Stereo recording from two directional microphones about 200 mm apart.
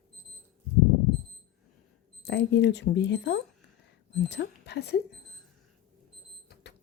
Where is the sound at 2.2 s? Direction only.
60° left (ahead or behind).